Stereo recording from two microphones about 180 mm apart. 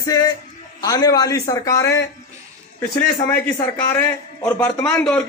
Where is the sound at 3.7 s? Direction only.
10° left (ahead or behind).